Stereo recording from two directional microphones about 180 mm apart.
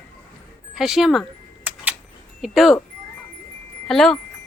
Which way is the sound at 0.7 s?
Centre (ahead or behind).